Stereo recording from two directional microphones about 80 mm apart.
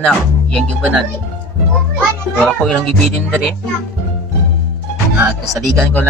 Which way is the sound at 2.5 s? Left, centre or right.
Centre.